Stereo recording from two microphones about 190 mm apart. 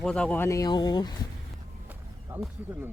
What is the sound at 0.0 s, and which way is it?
Speech, 5° left (ahead or behind).